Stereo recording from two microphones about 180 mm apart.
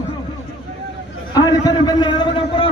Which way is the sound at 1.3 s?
20° left (ahead or behind).